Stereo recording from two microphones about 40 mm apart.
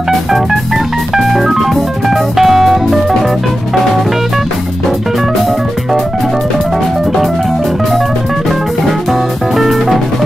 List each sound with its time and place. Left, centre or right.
1.1 s music: centre
8.5 s music: centre